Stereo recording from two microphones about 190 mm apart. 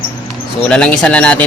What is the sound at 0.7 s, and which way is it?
Speech, 5° left (ahead or behind).